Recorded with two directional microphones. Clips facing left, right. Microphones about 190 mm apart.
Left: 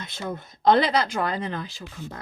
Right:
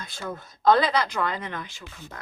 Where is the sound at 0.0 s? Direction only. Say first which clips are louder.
Left 2 dB; 20° left (ahead or behind).